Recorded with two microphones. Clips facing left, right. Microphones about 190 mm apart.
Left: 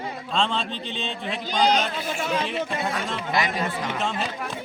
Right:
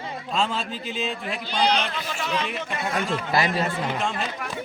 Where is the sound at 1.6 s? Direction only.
45° left (ahead or behind).